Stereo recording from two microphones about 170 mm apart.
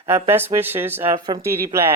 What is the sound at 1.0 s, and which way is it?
Speech, 25° right (ahead or behind).